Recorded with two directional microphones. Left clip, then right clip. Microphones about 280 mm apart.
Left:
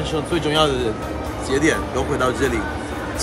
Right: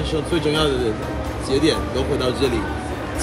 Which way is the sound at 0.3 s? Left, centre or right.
Centre.